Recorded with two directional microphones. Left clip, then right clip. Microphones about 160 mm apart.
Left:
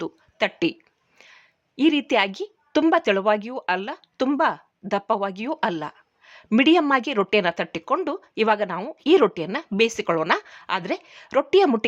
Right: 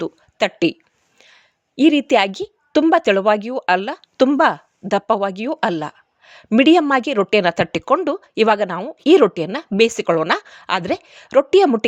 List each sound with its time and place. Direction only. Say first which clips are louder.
0.0 s a woman's voice: right 5 dB; 30° right (ahead or behind)
1.2 s a sound: right 1 dB; 25° right (ahead or behind)
2.9 s a woman's voice: right 6 dB; 25° right (ahead or behind)
7.9 s speech: right 6 dB; 25° right (ahead or behind)